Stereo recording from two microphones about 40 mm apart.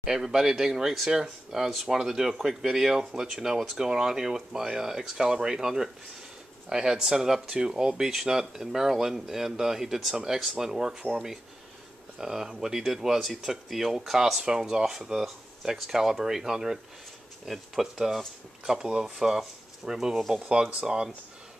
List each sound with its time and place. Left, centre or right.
0.0 s speech: centre